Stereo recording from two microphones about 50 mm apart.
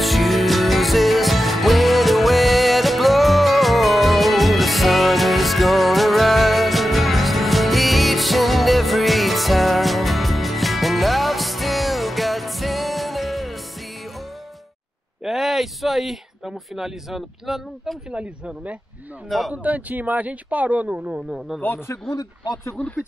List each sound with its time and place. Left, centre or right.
0.0 s music: centre
15.2 s a man's voice: centre
18.1 s speech: right
19.2 s speech: centre
19.5 s speech: right